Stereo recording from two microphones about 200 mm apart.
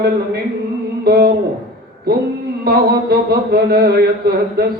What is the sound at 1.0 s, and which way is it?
Speech, 50° right (ahead or behind).